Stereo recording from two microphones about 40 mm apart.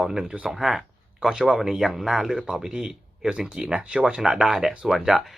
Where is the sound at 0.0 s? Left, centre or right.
Centre.